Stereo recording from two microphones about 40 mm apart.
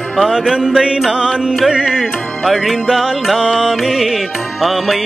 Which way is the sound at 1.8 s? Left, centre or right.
Centre.